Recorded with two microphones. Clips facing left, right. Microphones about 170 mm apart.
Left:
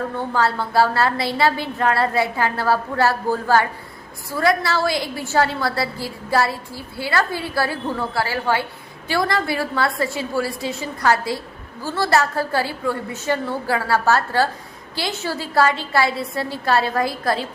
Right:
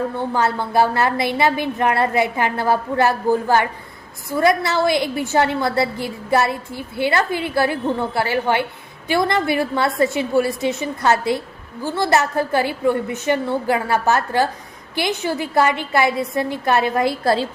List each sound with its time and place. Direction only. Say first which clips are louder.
0.2 s a woman's voice: left 2 dB; 20° right (ahead or behind)